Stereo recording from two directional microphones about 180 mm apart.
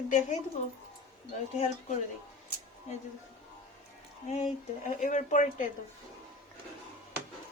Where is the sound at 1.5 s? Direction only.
35° left (ahead or behind).